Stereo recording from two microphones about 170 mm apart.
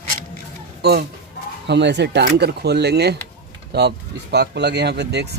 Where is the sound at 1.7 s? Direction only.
90° right.